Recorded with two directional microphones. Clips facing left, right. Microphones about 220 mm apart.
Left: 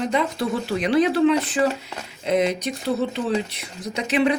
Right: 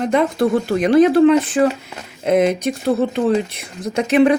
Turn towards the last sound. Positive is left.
turn(degrees=-50)  # may be behind; listen again after turning